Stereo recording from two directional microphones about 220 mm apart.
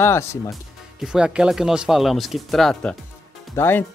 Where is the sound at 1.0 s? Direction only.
5° right (ahead or behind).